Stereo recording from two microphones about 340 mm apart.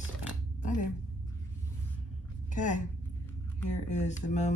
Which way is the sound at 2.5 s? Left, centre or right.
Left.